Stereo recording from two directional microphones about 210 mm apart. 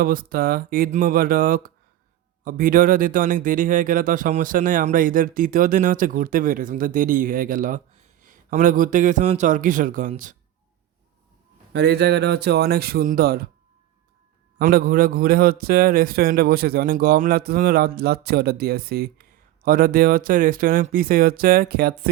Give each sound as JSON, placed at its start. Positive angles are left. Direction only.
{"t": 0.0, "sound": "a man's voice", "side_deg": -45}
{"t": 11.7, "sound": "a man's voice", "side_deg": -55}
{"t": 14.6, "sound": "a man's voice", "side_deg": -45}